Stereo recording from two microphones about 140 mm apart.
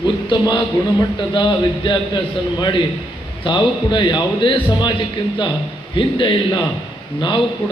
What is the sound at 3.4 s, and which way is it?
A man's voice, 35° left (ahead or behind).